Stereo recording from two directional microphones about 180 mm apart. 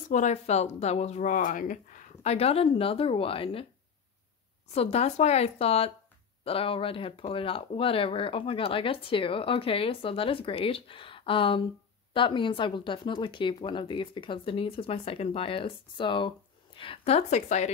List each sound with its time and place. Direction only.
0.1 s speech: 40° left (ahead or behind)
4.7 s speech: 35° left (ahead or behind)